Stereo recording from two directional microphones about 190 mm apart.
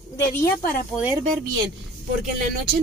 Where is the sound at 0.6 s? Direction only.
50° left (ahead or behind).